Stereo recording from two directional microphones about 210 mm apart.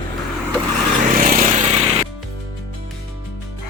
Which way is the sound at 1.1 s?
35° right (ahead or behind).